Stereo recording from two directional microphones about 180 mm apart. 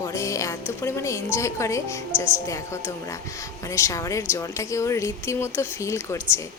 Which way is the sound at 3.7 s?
15° left (ahead or behind).